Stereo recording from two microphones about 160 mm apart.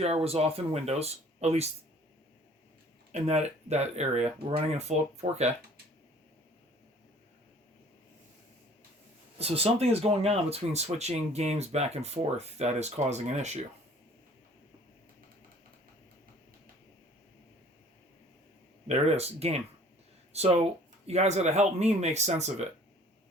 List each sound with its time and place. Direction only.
0.0 s speech: 40° right (ahead or behind)
3.1 s speech: 45° right (ahead or behind)
9.4 s speech: 40° right (ahead or behind)
18.9 s speech: 40° right (ahead or behind)